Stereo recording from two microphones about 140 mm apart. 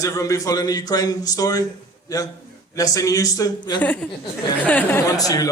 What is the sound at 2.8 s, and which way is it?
A man's voice, 25° left (ahead or behind).